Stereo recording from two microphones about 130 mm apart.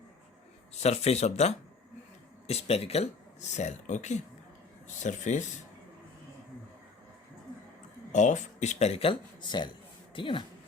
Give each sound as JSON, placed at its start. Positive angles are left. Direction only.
{"t": 0.7, "sound": "speech", "side_deg": 55}
{"t": 8.1, "sound": "speech", "side_deg": 70}